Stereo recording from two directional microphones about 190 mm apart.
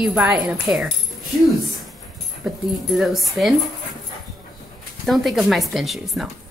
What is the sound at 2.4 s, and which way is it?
Speech, centre (ahead or behind).